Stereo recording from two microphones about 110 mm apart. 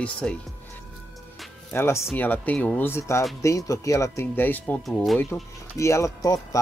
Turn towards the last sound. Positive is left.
turn(degrees=30)  # may be behind; listen again after turning